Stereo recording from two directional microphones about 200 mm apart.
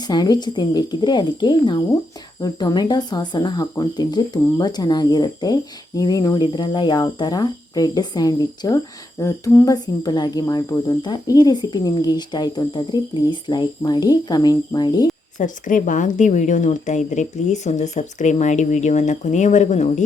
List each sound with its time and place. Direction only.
0.1 s speech: 20° left (ahead or behind)
15.4 s speech: 40° left (ahead or behind)